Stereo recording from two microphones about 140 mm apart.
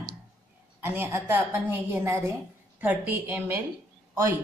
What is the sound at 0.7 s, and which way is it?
A woman's voice, 15° right (ahead or behind).